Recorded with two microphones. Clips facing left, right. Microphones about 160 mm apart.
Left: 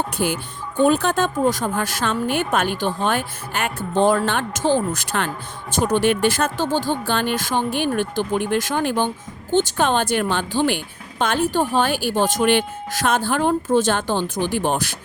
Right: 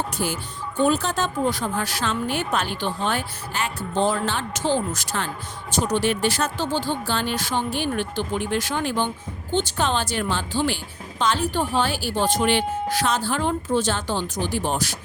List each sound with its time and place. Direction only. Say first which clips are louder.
0.2 s a woman's voice: left 4 dB; 60° left (ahead or behind)